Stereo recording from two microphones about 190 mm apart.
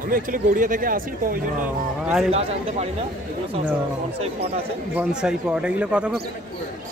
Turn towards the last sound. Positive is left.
turn(degrees=-5)  # may be behind; listen again after turning